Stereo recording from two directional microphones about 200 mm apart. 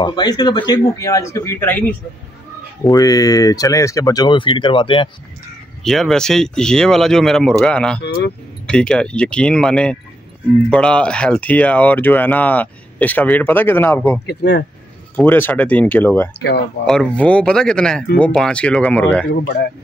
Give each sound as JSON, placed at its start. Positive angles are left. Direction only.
{"t": 0.0, "sound": "speech", "side_deg": 20}
{"t": 5.9, "sound": "speech", "side_deg": 0}
{"t": 8.0, "sound": "speech", "side_deg": 55}
{"t": 8.6, "sound": "speech", "side_deg": 5}
{"t": 14.2, "sound": "speech", "side_deg": 55}
{"t": 15.1, "sound": "speech", "side_deg": 10}
{"t": 16.3, "sound": "speech", "side_deg": 55}
{"t": 16.8, "sound": "speech", "side_deg": 5}